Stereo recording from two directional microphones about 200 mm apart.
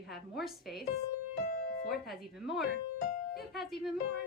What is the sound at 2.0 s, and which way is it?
Speech, centre (ahead or behind).